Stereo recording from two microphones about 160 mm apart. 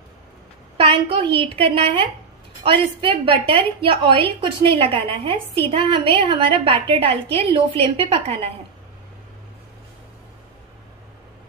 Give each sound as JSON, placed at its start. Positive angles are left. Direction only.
{"t": 0.7, "sound": "a woman's voice", "side_deg": -35}